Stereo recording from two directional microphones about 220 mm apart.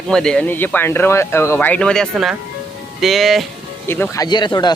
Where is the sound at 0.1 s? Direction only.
5° left (ahead or behind).